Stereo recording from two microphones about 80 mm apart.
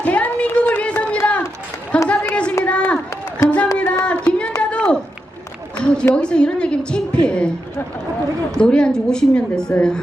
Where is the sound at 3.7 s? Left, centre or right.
Centre.